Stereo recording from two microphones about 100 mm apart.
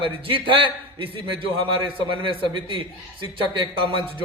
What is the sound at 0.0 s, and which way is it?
A man's voice, 60° right (ahead or behind).